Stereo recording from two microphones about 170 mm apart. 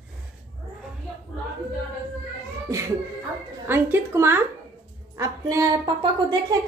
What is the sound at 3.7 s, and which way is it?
A woman's voice, 15° right (ahead or behind).